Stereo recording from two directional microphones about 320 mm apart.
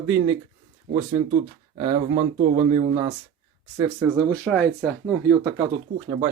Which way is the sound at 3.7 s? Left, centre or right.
Centre.